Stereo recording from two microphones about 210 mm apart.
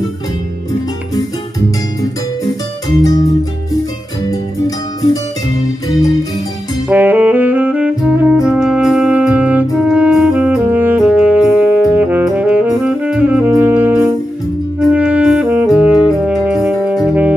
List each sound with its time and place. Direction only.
3.0 s music: 20° left (ahead or behind)
4.3 s music: 15° left (ahead or behind)
6.9 s saxophone: 10° right (ahead or behind)